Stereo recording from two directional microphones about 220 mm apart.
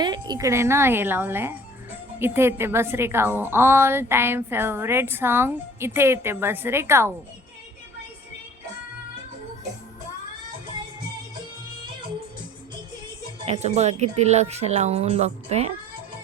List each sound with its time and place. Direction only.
0.0 s a woman's voice: 20° right (ahead or behind)
13.5 s speech: 30° right (ahead or behind)